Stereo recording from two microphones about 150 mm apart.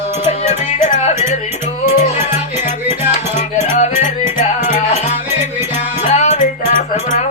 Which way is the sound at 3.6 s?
50° left (ahead or behind).